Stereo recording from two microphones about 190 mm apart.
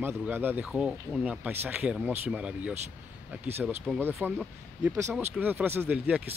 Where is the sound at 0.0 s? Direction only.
10° right (ahead or behind).